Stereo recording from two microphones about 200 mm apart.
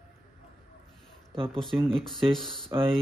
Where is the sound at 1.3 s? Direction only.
25° right (ahead or behind).